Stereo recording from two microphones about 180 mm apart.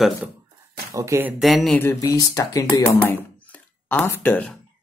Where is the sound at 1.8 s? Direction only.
15° left (ahead or behind).